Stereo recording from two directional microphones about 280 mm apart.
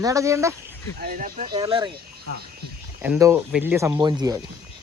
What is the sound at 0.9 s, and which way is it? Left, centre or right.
Speech, right.